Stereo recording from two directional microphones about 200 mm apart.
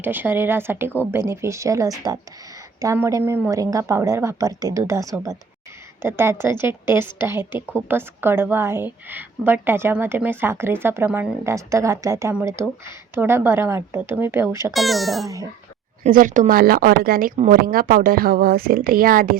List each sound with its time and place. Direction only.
0.0 s a woman's voice: 10° right (ahead or behind)
14.7 s a child's voice: centre (ahead or behind)
16.0 s a woman's voice: 40° right (ahead or behind)